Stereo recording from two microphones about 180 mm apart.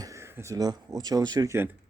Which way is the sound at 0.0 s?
15° right (ahead or behind).